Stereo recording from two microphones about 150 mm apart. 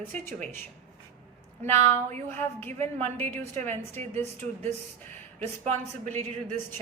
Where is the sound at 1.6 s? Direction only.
15° left (ahead or behind).